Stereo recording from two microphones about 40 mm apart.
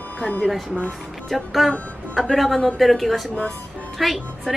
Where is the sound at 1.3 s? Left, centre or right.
Centre.